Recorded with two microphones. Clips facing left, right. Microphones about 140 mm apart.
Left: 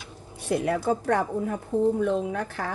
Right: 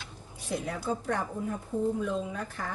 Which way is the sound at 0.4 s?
65° left (ahead or behind).